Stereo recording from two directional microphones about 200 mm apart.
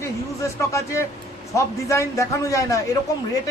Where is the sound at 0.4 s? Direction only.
15° left (ahead or behind).